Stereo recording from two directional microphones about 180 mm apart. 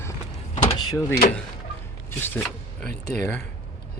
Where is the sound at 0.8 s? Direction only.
25° left (ahead or behind).